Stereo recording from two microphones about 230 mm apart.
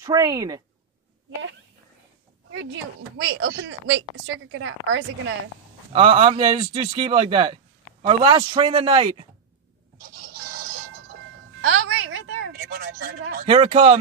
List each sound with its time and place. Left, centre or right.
0.0 s a woman's voice: centre
2.5 s a woman's voice: right
5.9 s speech: right
9.9 s a sound: right
11.6 s a sound: right
13.5 s speech: right